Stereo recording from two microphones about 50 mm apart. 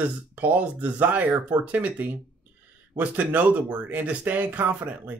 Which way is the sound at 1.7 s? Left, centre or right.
Right.